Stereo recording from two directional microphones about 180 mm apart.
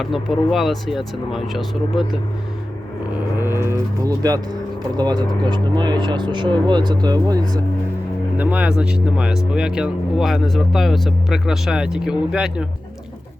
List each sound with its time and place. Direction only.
0.0 s speech: centre (ahead or behind)
3.3 s livestock: 15° right (ahead or behind)
4.9 s speech: 25° right (ahead or behind)
8.4 s speech: 10° right (ahead or behind)